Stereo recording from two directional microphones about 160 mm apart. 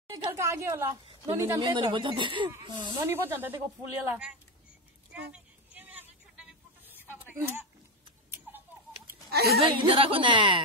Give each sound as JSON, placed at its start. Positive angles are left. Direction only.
{"t": 0.1, "sound": "a woman's voice", "side_deg": -20}
{"t": 1.6, "sound": "a woman's voice", "side_deg": -30}
{"t": 3.1, "sound": "a woman's voice", "side_deg": -15}
{"t": 5.3, "sound": "a sound", "side_deg": -10}
{"t": 9.3, "sound": "a woman's voice", "side_deg": -80}
{"t": 9.6, "sound": "a woman's voice", "side_deg": -35}